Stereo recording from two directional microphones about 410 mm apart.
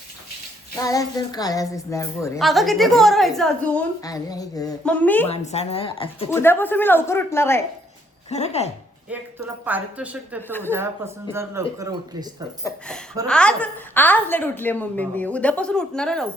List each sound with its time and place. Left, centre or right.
0.8 s a woman's voice: centre
5.3 s speech: centre
9.6 s a woman's voice: centre
13.2 s a woman's voice: centre